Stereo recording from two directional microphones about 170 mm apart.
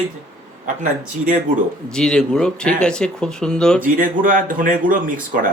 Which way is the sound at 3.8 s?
55° right (ahead or behind).